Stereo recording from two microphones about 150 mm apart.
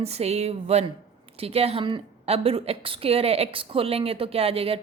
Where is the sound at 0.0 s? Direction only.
45° right (ahead or behind).